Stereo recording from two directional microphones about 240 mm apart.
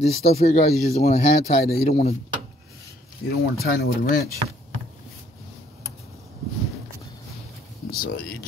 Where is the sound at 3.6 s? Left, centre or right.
Left.